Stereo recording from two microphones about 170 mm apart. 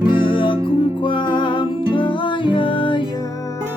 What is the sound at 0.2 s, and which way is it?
Music, 30° left (ahead or behind).